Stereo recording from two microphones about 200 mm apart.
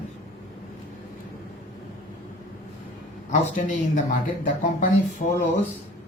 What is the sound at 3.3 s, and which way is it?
Speech, 40° left (ahead or behind).